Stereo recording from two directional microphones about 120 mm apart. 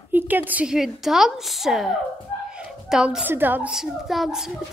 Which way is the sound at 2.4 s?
5° right (ahead or behind).